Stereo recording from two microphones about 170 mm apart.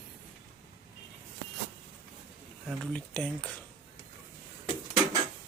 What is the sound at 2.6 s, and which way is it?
Speech, 5° left (ahead or behind).